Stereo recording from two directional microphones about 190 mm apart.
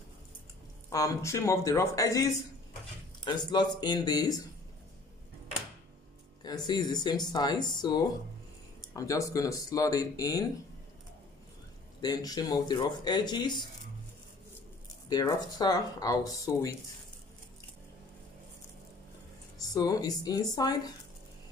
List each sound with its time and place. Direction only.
0.8 s speech: 15° left (ahead or behind)
6.4 s speech: 20° left (ahead or behind)
12.0 s speech: 20° left (ahead or behind)
15.0 s speech: 20° left (ahead or behind)
19.6 s speech: 20° left (ahead or behind)